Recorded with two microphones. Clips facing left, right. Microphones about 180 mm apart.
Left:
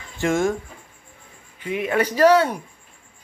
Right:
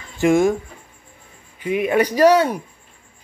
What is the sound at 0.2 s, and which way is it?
Speech, 15° right (ahead or behind).